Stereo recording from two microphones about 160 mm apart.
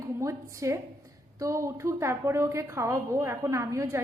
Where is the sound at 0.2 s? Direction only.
20° right (ahead or behind).